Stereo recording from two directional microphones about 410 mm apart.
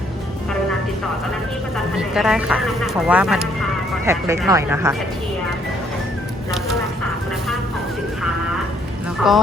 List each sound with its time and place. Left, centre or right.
2.0 s speech: centre
9.2 s speech: centre